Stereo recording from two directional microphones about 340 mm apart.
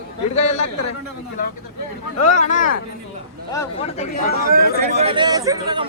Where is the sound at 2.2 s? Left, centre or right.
Left.